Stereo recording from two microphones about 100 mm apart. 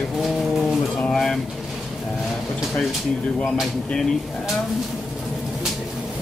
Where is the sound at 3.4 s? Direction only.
Centre (ahead or behind).